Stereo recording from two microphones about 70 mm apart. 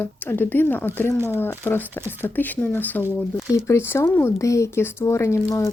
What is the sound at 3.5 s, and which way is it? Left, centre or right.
Speech, left.